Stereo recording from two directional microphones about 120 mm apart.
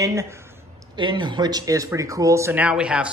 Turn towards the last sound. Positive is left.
turn(degrees=-10)  # may be behind; listen again after turning